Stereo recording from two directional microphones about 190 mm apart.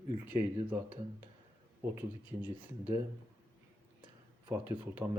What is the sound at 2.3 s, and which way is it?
Speech, 10° right (ahead or behind).